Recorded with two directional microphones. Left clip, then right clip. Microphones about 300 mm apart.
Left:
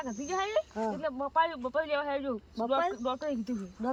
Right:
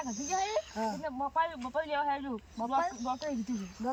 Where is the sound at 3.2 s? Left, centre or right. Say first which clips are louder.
Left 2 dB; centre.